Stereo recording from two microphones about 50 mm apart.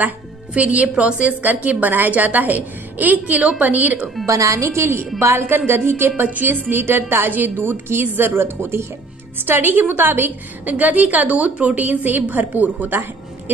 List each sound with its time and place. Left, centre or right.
0.6 s a woman's voice: right
4.3 s a woman's voice: right
5.7 s a woman's voice: right
9.5 s a woman's voice: right